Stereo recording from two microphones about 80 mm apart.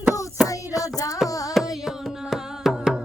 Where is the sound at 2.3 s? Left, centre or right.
Centre.